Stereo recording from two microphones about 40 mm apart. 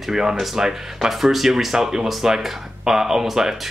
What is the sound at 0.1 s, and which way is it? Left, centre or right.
Speech, centre.